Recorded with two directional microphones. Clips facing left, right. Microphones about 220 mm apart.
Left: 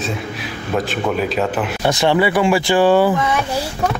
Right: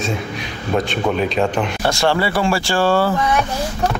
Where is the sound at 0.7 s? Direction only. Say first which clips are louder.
Right 1 dB; 5° left (ahead or behind).